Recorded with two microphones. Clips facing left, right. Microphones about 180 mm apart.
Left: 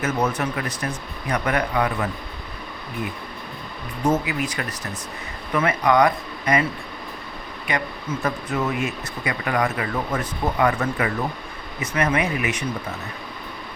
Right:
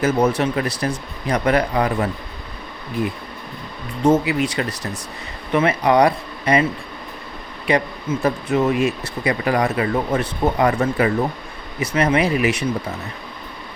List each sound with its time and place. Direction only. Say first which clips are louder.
0.0 s speech: right 6 dB; 30° right (ahead or behind)
4.0 s speech: right 6 dB; 30° right (ahead or behind)
8.2 s speech: right 6 dB; 25° right (ahead or behind)